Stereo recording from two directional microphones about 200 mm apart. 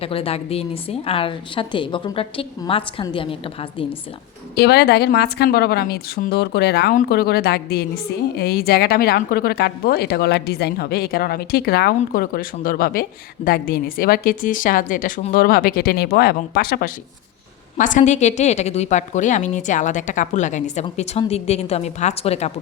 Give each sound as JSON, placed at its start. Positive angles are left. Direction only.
{"t": 0.0, "sound": "a woman's voice", "side_deg": 30}
{"t": 4.5, "sound": "a woman's voice", "side_deg": 55}